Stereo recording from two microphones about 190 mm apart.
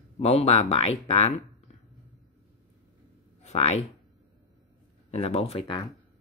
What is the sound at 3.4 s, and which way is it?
Speech, 35° left (ahead or behind).